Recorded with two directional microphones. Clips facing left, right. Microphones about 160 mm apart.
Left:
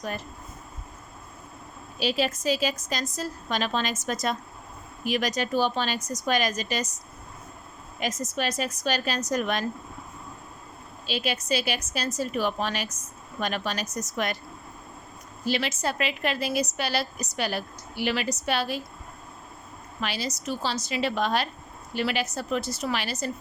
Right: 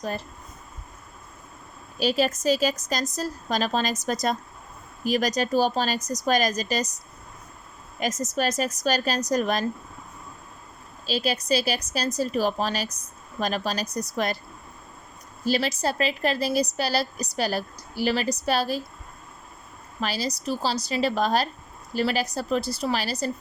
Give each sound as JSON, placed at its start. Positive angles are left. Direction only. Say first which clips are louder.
{"t": 2.0, "sound": "a woman's voice", "louder": "right 3 dB", "side_deg": -45}
{"t": 11.0, "sound": "a woman's voice", "louder": "right 3 dB", "side_deg": -35}
{"t": 15.4, "sound": "a woman's voice", "louder": "right 3 dB", "side_deg": -35}
{"t": 20.0, "sound": "a woman's voice", "louder": "right 3 dB", "side_deg": -35}